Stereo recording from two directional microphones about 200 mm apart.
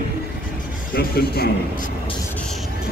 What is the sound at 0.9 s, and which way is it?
Speech, 50° left (ahead or behind).